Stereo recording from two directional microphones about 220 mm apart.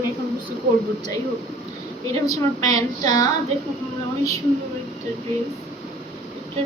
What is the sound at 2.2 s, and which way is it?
A woman's voice, 15° left (ahead or behind).